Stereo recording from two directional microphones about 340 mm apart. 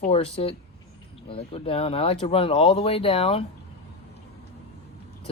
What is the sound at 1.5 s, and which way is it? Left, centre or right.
Speech, centre.